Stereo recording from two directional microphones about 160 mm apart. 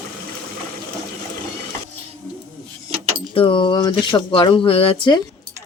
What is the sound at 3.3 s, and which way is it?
Keys jangling, 35° left (ahead or behind).